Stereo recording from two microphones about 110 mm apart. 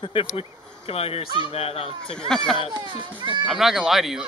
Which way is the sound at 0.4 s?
65° left (ahead or behind).